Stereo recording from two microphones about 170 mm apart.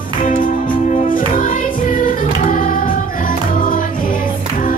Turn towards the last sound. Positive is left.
turn(degrees=55)  # may be behind; listen again after turning